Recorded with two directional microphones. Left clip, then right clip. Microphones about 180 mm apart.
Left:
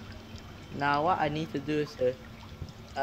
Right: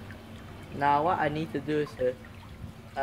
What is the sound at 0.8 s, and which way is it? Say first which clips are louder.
Speech: right 2 dB; 50° left (ahead or behind).